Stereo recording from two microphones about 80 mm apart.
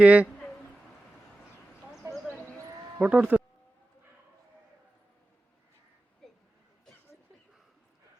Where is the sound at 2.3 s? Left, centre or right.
Centre.